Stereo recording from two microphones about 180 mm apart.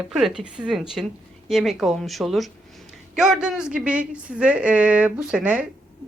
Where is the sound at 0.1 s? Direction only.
Centre (ahead or behind).